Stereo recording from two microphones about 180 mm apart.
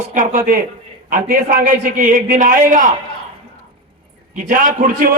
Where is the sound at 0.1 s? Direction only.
45° right (ahead or behind).